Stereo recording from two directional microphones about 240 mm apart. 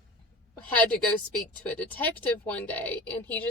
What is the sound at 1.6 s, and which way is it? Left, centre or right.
A woman's voice, centre.